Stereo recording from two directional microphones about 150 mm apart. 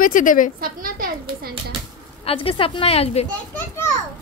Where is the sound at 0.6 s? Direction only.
75° right (ahead or behind).